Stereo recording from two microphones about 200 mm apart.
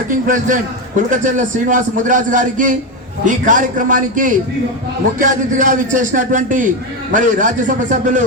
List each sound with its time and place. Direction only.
0.1 s a man's voice: 40° right (ahead or behind)